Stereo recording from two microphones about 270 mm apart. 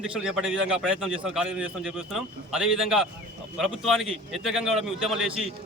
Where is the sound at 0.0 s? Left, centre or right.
Centre.